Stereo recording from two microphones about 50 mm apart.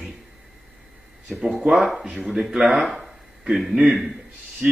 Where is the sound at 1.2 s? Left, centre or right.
Centre.